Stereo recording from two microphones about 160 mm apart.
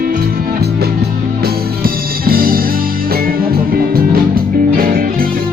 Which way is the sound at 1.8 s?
65° right (ahead or behind).